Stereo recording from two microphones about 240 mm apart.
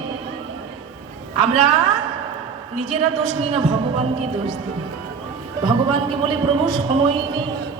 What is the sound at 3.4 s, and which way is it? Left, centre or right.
Speech, right.